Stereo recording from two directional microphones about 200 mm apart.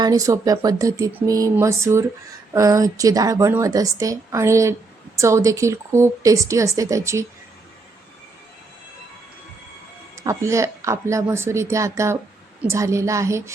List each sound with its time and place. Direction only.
0.0 s a woman's voice: 15° right (ahead or behind)
10.2 s a woman's voice: 15° right (ahead or behind)